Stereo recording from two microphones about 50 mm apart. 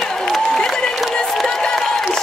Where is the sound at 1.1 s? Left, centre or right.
Centre.